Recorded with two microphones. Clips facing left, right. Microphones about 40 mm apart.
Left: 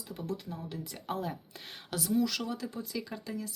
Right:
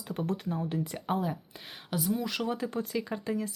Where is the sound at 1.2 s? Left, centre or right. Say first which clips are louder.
Right 4 dB; centre; by 2.7 s right.